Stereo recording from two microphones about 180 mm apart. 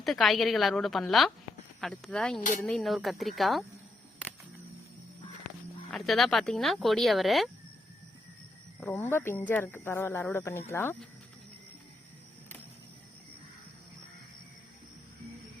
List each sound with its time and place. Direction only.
0.0 s speech: centre (ahead or behind)
2.4 s speech: 50° left (ahead or behind)
2.6 s speech: centre (ahead or behind)
5.9 s speech: centre (ahead or behind)
8.8 s speech: 10° left (ahead or behind)